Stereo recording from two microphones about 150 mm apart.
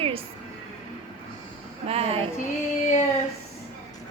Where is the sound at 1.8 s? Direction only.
40° right (ahead or behind).